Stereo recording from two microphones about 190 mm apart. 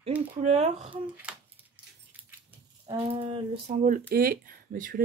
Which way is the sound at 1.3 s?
5° right (ahead or behind).